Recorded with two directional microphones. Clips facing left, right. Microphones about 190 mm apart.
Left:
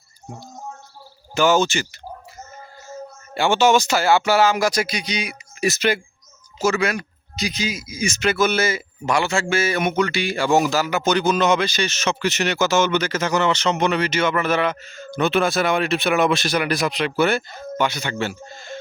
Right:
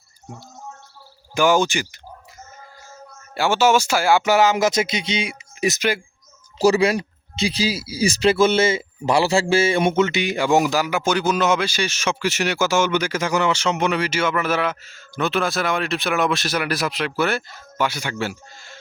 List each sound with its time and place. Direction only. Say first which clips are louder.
1.4 s speech: even; 10° right (ahead or behind)
3.3 s speech: left 1 dB; 5° right (ahead or behind)
6.6 s speech: right 4 dB; 35° right (ahead or behind); by 18.3 s 10° right (ahead or behind)